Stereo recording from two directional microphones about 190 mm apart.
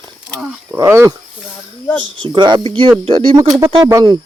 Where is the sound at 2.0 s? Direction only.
90° right.